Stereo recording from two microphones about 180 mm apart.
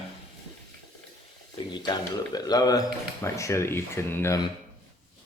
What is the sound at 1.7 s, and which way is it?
Speech, 25° left (ahead or behind).